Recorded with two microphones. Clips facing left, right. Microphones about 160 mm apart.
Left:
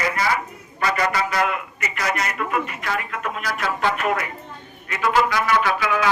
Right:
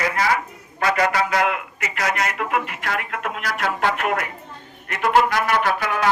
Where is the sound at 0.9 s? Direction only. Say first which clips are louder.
Right 2 dB; 90° right.